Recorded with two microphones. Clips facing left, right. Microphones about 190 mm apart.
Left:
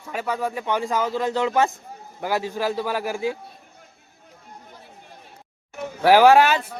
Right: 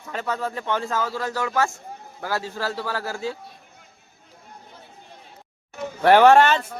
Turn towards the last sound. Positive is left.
turn(degrees=5)  # may be behind; listen again after turning